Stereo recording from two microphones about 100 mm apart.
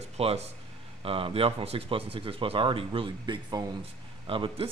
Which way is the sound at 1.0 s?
70° right (ahead or behind).